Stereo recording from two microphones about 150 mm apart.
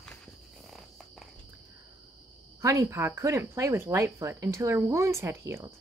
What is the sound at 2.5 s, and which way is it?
Speech, 20° right (ahead or behind).